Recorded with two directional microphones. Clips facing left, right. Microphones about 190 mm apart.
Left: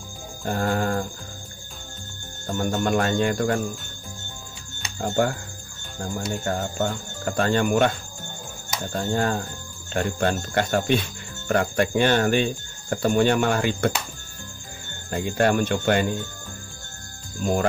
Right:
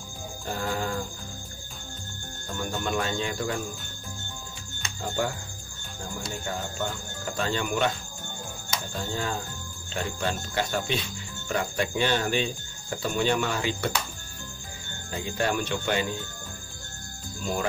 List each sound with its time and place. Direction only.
0.5 s speech: 55° left (ahead or behind)
2.6 s speech: 50° left (ahead or behind)
5.0 s speech: 45° left (ahead or behind)
6.4 s speech: 55° left (ahead or behind)
8.9 s speech: 50° left (ahead or behind)
15.0 s speech: 55° left (ahead or behind)
17.4 s speech: 50° left (ahead or behind)